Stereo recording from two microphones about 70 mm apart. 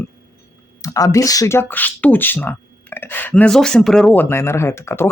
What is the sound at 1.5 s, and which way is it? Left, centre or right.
Speech, left.